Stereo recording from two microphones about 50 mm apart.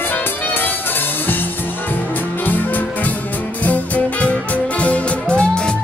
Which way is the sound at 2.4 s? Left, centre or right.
Left.